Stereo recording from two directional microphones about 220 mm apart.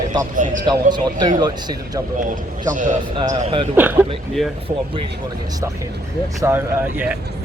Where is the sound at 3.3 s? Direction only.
30° right (ahead or behind).